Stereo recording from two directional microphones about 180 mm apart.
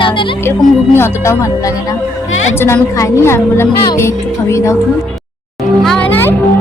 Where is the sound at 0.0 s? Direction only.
30° left (ahead or behind).